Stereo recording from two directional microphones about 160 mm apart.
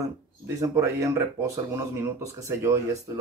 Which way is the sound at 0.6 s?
20° right (ahead or behind).